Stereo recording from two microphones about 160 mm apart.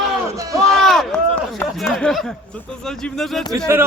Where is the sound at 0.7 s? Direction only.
Centre (ahead or behind).